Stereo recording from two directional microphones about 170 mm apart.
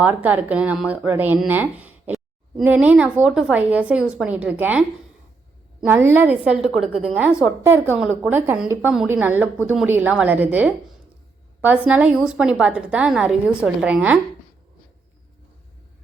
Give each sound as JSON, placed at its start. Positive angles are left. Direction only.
{"t": 0.0, "sound": "speech", "side_deg": -10}
{"t": 5.9, "sound": "speech", "side_deg": -10}